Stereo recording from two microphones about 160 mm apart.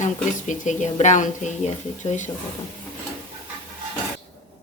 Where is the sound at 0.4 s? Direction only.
50° left (ahead or behind).